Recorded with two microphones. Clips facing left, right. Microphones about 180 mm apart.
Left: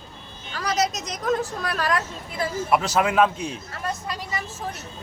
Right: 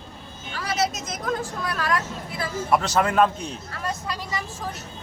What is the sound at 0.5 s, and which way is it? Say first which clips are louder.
Speech: left 4 dB; 40° left (ahead or behind).